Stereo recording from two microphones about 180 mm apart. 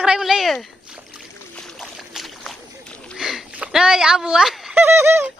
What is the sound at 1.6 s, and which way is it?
Boat, centre (ahead or behind).